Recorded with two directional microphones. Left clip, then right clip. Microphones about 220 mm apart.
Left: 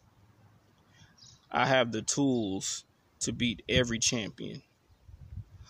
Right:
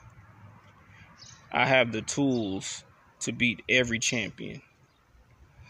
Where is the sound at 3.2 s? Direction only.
15° left (ahead or behind).